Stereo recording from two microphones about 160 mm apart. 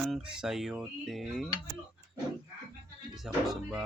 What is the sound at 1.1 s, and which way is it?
Speech, centre (ahead or behind).